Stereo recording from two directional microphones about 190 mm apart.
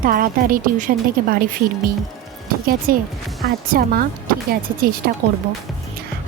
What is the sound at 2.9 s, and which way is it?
Speech, 50° right (ahead or behind).